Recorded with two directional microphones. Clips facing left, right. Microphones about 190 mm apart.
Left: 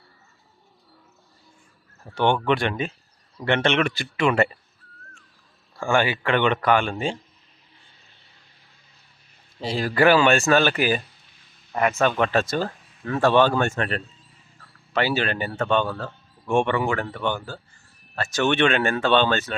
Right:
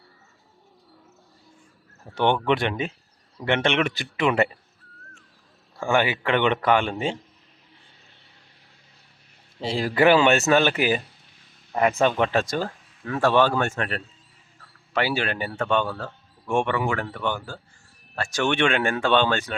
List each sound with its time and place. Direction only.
2.0 s speech: 20° right (ahead or behind)
5.7 s speech: 20° right (ahead or behind)
9.6 s speech: 25° right (ahead or behind)
12.1 s speech: 15° right (ahead or behind)